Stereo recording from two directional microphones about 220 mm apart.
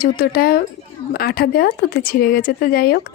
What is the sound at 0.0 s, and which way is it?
Speech, 45° left (ahead or behind).